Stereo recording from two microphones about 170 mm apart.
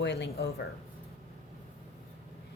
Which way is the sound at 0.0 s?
90° left.